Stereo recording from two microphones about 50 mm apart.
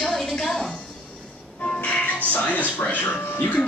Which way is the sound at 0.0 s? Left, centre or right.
Centre.